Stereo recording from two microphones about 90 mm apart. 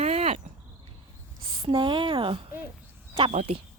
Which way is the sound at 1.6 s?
65° right (ahead or behind).